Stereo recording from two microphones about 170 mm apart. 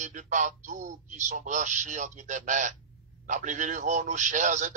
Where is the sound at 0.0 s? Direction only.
45° right (ahead or behind).